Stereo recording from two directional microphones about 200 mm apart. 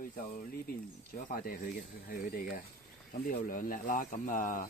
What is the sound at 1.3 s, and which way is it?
Speech, 45° left (ahead or behind).